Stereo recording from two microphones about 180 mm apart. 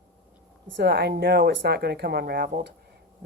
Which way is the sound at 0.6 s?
70° right (ahead or behind).